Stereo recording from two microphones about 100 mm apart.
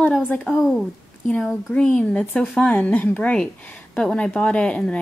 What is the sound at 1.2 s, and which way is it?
A woman's voice, 10° left (ahead or behind).